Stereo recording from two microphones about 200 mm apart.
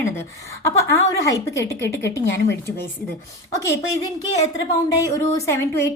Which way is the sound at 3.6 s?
15° left (ahead or behind).